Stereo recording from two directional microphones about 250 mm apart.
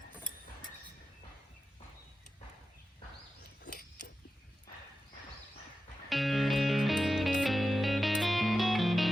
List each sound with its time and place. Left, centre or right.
3.6 s mechanisms: left
6.1 s music: centre